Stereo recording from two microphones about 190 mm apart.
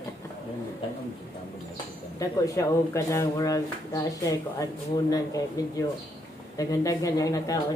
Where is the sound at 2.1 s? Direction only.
15° left (ahead or behind).